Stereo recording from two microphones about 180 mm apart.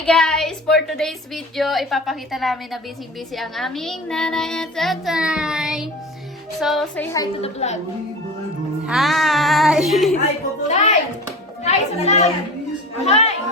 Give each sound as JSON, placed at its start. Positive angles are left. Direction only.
{"t": 0.0, "sound": "speech", "side_deg": 5}
{"t": 7.4, "sound": "a child's voice", "side_deg": 40}
{"t": 8.9, "sound": "speech", "side_deg": 0}
{"t": 10.7, "sound": "a child's voice", "side_deg": 40}